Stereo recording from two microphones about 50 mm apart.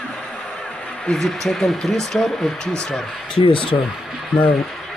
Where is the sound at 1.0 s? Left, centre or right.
Centre.